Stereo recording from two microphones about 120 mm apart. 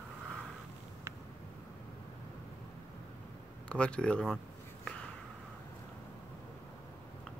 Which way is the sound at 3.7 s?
10° left (ahead or behind).